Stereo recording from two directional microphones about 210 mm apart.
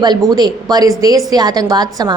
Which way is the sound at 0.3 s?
20° right (ahead or behind).